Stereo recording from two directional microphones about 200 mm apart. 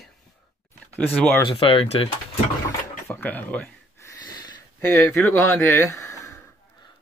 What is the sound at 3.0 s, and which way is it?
Speech, 10° left (ahead or behind).